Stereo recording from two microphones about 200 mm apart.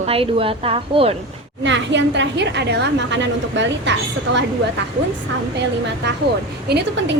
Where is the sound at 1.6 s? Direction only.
65° right (ahead or behind).